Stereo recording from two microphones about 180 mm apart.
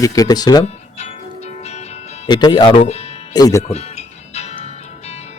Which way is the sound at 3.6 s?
35° left (ahead or behind).